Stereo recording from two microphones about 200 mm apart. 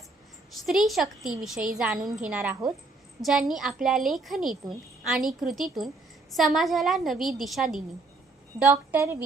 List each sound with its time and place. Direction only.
0.6 s a woman's voice: centre (ahead or behind)